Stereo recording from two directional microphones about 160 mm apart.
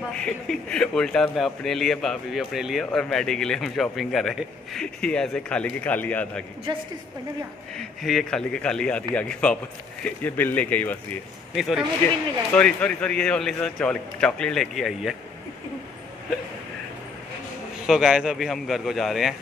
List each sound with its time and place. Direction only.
0.1 s a man's voice: 5° left (ahead or behind)
6.7 s a woman's voice: 30° right (ahead or behind)
7.7 s a man's voice: centre (ahead or behind)
11.5 s a man's voice: centre (ahead or behind)
17.8 s a man's voice: centre (ahead or behind)